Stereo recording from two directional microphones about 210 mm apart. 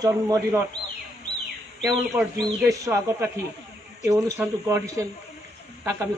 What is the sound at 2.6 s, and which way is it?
Speech, 15° right (ahead or behind).